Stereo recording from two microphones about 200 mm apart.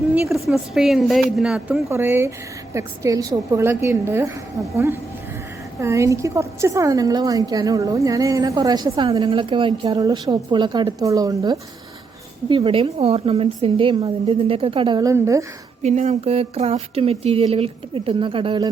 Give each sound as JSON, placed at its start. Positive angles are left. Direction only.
{"t": 0.1, "sound": "a woman's voice", "side_deg": 0}
{"t": 15.8, "sound": "a woman's voice", "side_deg": -35}